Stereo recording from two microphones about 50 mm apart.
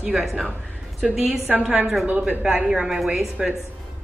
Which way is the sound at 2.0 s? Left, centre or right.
Right.